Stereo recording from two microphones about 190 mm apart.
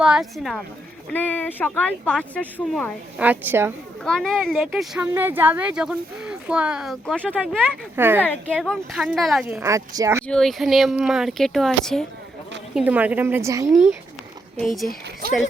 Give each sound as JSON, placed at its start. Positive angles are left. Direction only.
{"t": 0.0, "sound": "speech", "side_deg": -5}
{"t": 3.2, "sound": "a woman's voice", "side_deg": -10}
{"t": 4.0, "sound": "speech", "side_deg": 5}
{"t": 7.9, "sound": "a woman's voice", "side_deg": -10}
{"t": 8.2, "sound": "speech", "side_deg": 5}
{"t": 9.6, "sound": "a woman's voice", "side_deg": -15}
{"t": 10.2, "sound": "speech", "side_deg": 5}
{"t": 12.7, "sound": "a woman's voice", "side_deg": -10}
{"t": 14.6, "sound": "speech", "side_deg": 0}